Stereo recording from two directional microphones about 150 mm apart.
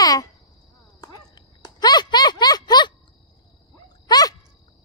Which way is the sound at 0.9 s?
25° left (ahead or behind).